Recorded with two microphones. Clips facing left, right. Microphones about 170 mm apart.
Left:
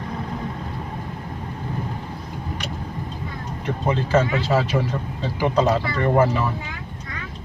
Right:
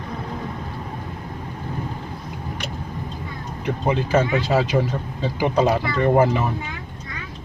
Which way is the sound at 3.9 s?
15° right (ahead or behind).